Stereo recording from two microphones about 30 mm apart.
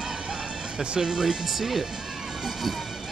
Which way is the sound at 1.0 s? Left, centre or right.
Right.